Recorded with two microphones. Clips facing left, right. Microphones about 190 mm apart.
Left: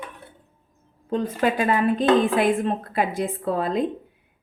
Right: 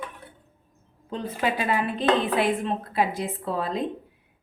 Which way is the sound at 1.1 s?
45° left (ahead or behind).